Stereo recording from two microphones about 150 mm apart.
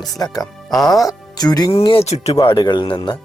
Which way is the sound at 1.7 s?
35° left (ahead or behind).